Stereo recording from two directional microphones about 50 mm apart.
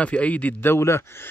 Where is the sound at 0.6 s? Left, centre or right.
Left.